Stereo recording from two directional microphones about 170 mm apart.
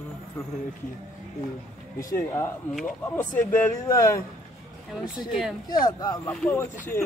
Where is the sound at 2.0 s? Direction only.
20° left (ahead or behind).